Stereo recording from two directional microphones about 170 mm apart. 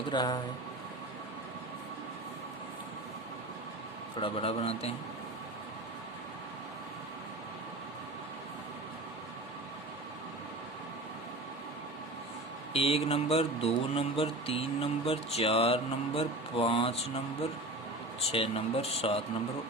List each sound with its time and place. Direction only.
0.1 s speech: 25° left (ahead or behind)
4.2 s speech: 35° left (ahead or behind)
12.7 s speech: 35° left (ahead or behind)
18.3 s speech: 35° left (ahead or behind)